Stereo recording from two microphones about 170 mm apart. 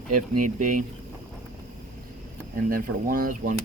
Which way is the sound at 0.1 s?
50° right (ahead or behind).